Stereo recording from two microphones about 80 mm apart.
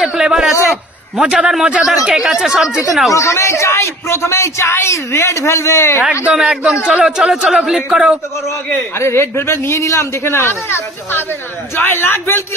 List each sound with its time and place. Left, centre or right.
0.0 s a sound: centre
0.7 s a man's voice: centre
3.1 s a man's voice: left
6.2 s speech: centre
8.9 s a man's voice: left